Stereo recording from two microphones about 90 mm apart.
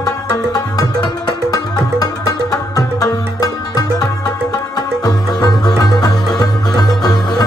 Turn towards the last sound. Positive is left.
turn(degrees=45)  # may be behind; listen again after turning